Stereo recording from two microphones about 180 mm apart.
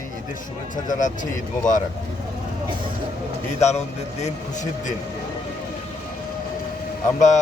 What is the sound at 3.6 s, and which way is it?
Speech, 40° left (ahead or behind).